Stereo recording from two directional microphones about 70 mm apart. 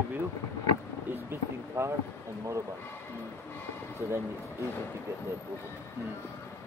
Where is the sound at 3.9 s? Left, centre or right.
Right.